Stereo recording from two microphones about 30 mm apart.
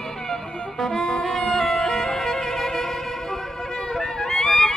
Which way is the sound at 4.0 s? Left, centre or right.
Centre.